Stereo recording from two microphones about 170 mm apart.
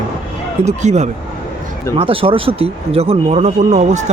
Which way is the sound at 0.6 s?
40° right (ahead or behind).